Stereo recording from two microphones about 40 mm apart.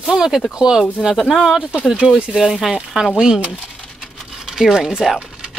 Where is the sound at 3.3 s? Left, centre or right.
Right.